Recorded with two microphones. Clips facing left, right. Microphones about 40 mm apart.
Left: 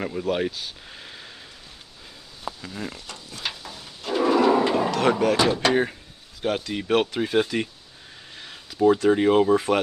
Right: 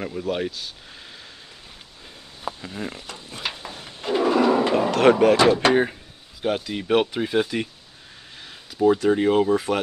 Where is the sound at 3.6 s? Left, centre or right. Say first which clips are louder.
Right 3 dB; right.